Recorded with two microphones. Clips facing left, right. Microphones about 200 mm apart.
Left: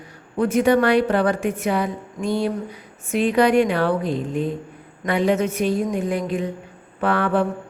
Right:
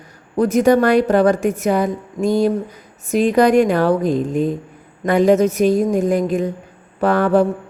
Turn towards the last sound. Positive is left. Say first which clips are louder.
# right 6 dB
turn(degrees=-40)  # may be behind; listen again after turning